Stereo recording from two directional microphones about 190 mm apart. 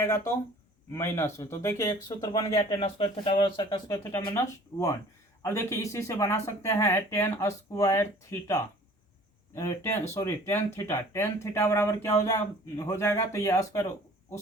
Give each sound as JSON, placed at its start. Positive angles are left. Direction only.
{"t": 0.9, "sound": "speech", "side_deg": 15}
{"t": 2.7, "sound": "speech", "side_deg": 30}